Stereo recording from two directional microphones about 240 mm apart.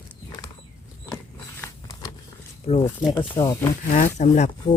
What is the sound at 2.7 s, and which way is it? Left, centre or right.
Speech, left.